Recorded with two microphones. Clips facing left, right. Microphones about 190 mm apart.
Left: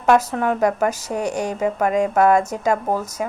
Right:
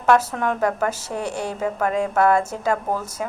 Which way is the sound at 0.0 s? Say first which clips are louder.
Left 2 dB; 10° left (ahead or behind).